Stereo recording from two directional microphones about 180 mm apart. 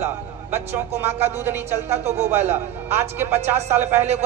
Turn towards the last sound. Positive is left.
turn(degrees=-10)  # may be behind; listen again after turning